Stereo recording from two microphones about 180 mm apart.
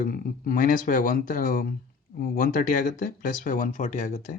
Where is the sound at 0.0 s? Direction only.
50° left (ahead or behind).